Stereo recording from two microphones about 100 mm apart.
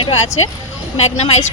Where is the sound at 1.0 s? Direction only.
90° left.